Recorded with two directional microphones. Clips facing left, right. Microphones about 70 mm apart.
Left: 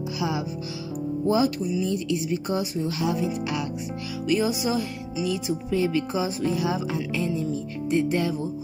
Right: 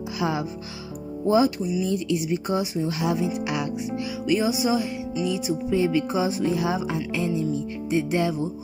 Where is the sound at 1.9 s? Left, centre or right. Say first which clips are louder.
Right 1 dB; right.